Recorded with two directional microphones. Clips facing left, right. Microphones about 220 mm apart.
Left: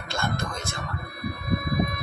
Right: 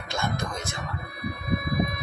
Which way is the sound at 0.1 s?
20° right (ahead or behind).